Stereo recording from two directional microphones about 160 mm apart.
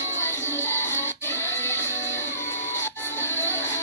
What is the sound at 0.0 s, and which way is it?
Music, 15° left (ahead or behind).